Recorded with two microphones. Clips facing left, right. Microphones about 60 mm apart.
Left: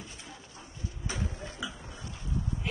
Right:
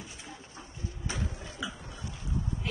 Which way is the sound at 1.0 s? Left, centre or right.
Right.